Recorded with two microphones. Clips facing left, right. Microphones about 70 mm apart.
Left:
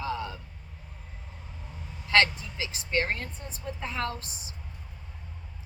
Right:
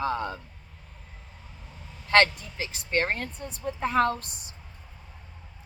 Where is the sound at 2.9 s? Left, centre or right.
Right.